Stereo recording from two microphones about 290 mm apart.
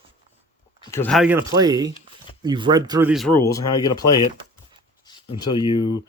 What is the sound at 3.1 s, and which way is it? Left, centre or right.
Speech, centre.